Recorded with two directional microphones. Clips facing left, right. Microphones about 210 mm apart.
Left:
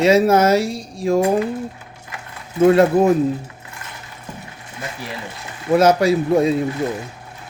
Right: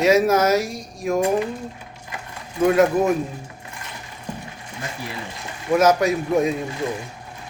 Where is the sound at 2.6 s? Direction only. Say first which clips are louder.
Left 4 dB; 30° left (ahead or behind).